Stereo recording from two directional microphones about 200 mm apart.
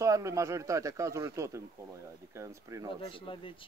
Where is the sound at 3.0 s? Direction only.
25° left (ahead or behind).